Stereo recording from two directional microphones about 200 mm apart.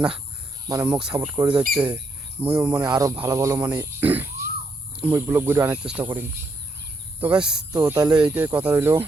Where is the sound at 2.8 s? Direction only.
15° right (ahead or behind).